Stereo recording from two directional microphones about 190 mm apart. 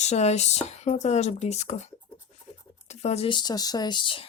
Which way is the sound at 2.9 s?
35° left (ahead or behind).